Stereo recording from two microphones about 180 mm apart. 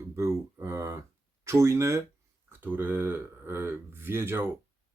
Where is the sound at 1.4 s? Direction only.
15° right (ahead or behind).